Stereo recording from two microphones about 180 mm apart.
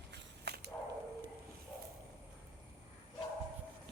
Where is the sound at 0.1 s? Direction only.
65° right (ahead or behind).